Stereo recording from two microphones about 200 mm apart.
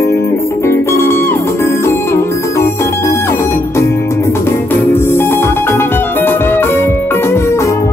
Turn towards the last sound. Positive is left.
turn(degrees=15)  # may be behind; listen again after turning